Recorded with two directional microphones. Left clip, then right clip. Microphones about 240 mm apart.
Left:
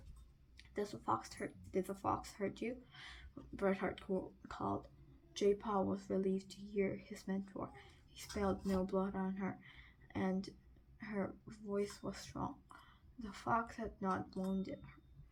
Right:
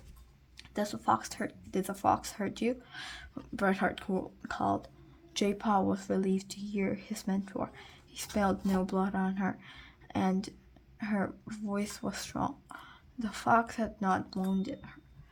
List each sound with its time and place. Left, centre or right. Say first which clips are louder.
0.5 s speech: right 8 dB; right